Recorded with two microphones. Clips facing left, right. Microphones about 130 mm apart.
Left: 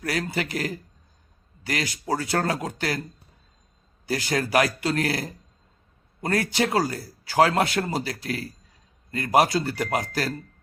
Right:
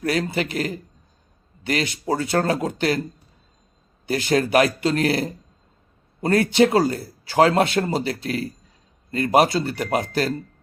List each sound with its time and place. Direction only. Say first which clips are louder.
0.0 s speech: right 5 dB; 25° right (ahead or behind)
4.0 s speech: right 5 dB; 25° right (ahead or behind)